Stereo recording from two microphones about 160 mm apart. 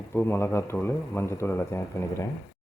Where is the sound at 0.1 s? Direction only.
15° left (ahead or behind).